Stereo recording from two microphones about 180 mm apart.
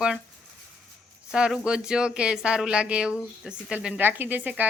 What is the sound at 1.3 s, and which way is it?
A woman's voice, 5° right (ahead or behind).